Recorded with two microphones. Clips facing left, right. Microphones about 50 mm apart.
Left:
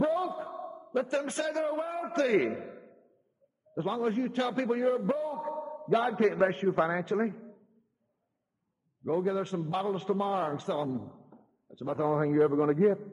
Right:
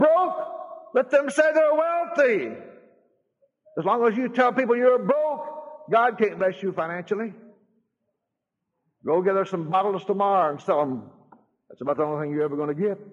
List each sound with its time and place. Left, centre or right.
0.1 s a sound: right
0.7 s a man's voice: right
1.7 s a man's voice: right
2.1 s a man's voice: right
3.7 s a man's voice: right
5.1 s a sound: centre
6.0 s a man's voice: right
9.0 s a man's voice: right
12.1 s a man's voice: centre